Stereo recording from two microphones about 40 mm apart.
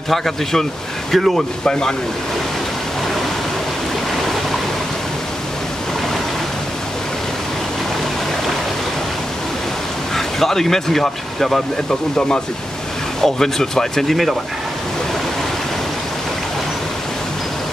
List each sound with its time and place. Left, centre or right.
0.1 s speech: centre
1.6 s speech: centre
10.1 s speech: centre
13.2 s speech: centre